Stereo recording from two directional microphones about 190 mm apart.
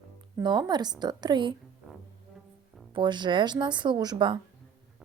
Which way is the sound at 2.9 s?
25° right (ahead or behind).